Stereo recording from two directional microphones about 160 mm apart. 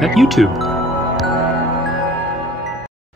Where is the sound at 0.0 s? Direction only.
Centre (ahead or behind).